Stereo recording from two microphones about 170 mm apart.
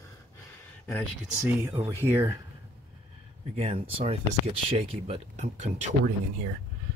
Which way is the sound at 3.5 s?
35° right (ahead or behind).